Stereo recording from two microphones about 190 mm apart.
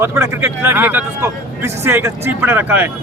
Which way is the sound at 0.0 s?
15° right (ahead or behind).